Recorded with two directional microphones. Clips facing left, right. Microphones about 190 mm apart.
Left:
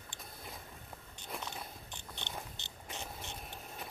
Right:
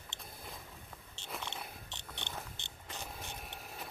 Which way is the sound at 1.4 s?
25° right (ahead or behind).